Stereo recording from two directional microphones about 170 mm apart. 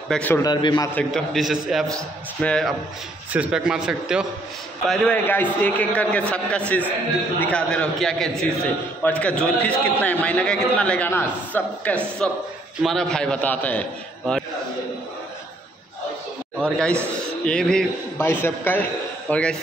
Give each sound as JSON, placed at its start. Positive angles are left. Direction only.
{"t": 0.1, "sound": "a man's voice", "side_deg": 10}
{"t": 0.4, "sound": "a man's voice", "side_deg": 25}
{"t": 0.9, "sound": "a man's voice", "side_deg": 0}
{"t": 16.5, "sound": "a man's voice", "side_deg": 5}